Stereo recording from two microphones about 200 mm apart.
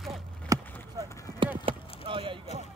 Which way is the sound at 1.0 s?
15° left (ahead or behind).